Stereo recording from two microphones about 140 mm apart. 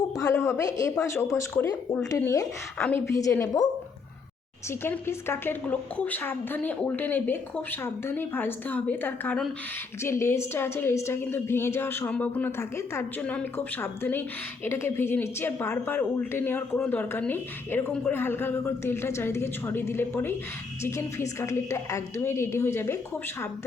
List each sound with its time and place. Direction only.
0.2 s a woman's voice: 20° left (ahead or behind)
4.7 s a woman's voice: 15° left (ahead or behind)